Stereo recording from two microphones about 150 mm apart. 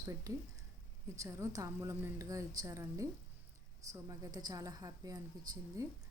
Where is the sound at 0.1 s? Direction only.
20° right (ahead or behind).